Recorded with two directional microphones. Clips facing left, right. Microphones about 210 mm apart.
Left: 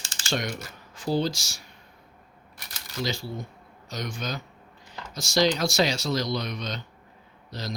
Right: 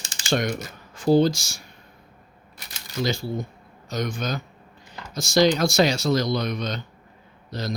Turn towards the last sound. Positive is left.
turn(degrees=-50)  # may be behind; listen again after turning